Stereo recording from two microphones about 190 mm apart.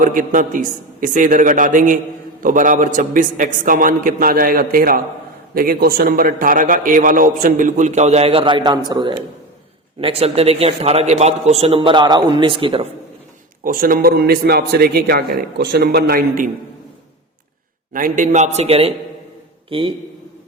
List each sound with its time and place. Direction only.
0.0 s a man's voice: 45° right (ahead or behind); by 12.8 s 25° right (ahead or behind)
13.7 s a man's voice: 50° right (ahead or behind)
17.9 s a man's voice: 45° right (ahead or behind); by 19.9 s 30° right (ahead or behind)